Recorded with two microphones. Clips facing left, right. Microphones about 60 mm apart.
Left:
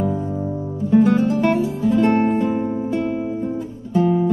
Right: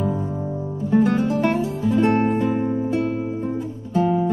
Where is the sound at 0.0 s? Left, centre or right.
Centre.